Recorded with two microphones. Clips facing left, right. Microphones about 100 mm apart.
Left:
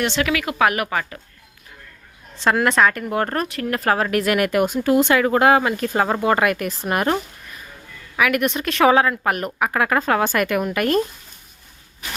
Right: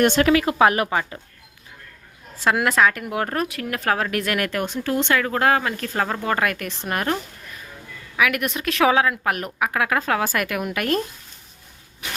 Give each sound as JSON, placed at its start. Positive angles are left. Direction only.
{"t": 0.0, "sound": "speech", "side_deg": -45}
{"t": 2.4, "sound": "speech", "side_deg": -5}